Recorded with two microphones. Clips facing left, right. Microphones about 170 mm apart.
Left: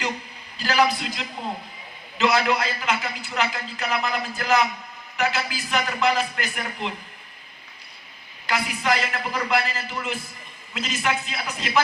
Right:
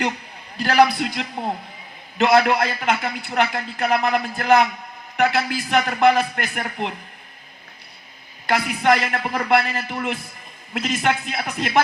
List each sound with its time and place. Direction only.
0.5 s a man's voice: 60° right (ahead or behind)
8.4 s a man's voice: 60° right (ahead or behind)